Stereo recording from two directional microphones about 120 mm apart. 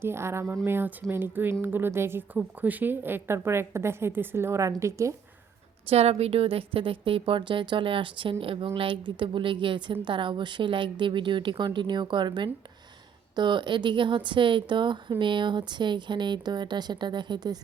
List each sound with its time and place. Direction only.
0.0 s a woman's voice: 20° right (ahead or behind)
5.9 s a woman's voice: 60° right (ahead or behind); by 17.6 s 35° right (ahead or behind)